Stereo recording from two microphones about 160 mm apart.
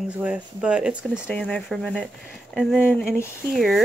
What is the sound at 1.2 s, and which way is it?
Speech, 5° left (ahead or behind).